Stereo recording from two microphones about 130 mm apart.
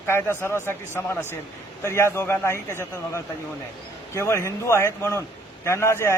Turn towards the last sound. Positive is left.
turn(degrees=20)  # may be behind; listen again after turning